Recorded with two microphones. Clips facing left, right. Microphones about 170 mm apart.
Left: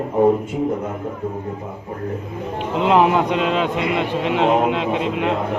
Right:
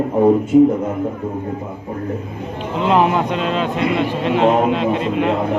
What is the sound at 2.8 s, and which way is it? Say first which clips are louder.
A man's voice: even; 15° left (ahead or behind).